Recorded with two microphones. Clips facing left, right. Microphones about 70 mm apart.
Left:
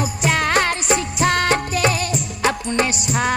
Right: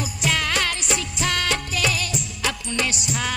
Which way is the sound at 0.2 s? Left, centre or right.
Left.